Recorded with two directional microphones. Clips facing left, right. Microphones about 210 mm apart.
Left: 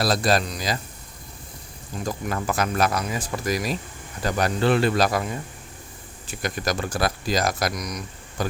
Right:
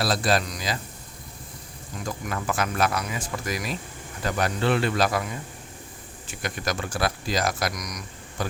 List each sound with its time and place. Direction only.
0.0 s speech: 40° left (ahead or behind)
2.0 s speech: 35° left (ahead or behind)
6.2 s speech: 40° left (ahead or behind)
8.4 s speech: 40° left (ahead or behind)